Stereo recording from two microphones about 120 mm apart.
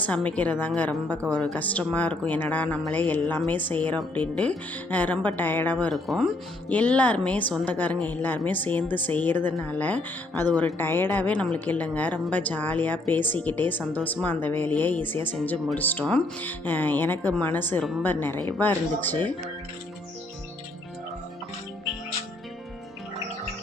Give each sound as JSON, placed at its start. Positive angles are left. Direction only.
{"t": 0.0, "sound": "a woman's voice", "side_deg": 10}
{"t": 5.9, "sound": "speech", "side_deg": 0}
{"t": 6.7, "sound": "a woman's voice", "side_deg": 15}